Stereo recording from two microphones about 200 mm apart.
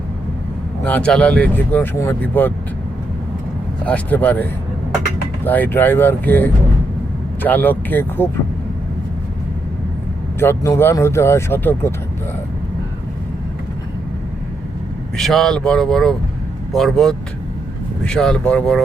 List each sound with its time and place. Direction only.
0.9 s speech: 5° left (ahead or behind)
3.8 s speech: 5° left (ahead or behind)
5.5 s speech: 10° left (ahead or behind)
10.4 s speech: 15° left (ahead or behind)
15.1 s speech: centre (ahead or behind)